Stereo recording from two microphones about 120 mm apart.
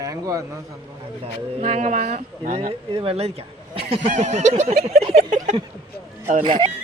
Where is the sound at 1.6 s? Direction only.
85° right; by 4.1 s 50° right (ahead or behind).